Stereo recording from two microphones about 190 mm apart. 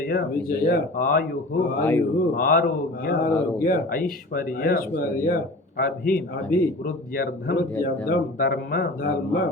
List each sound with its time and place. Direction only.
0.1 s speech: 50° left (ahead or behind)
1.8 s a man's voice: 10° left (ahead or behind)
2.1 s speech: 50° left (ahead or behind)